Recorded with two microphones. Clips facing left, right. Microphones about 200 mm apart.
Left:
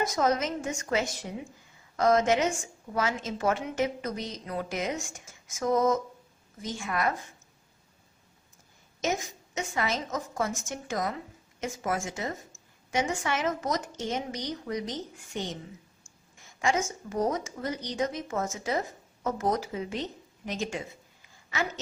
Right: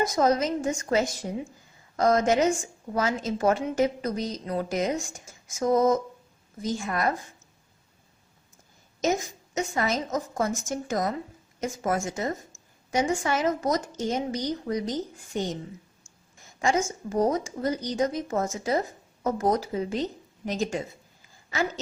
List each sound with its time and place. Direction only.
0.2 s a woman's voice: 35° right (ahead or behind)
9.6 s a woman's voice: 40° right (ahead or behind)
16.6 s a woman's voice: 35° right (ahead or behind)